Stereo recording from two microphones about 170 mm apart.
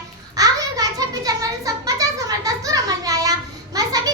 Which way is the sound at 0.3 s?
20° right (ahead or behind).